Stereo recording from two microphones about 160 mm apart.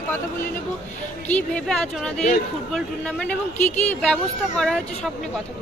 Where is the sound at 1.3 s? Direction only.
5° left (ahead or behind).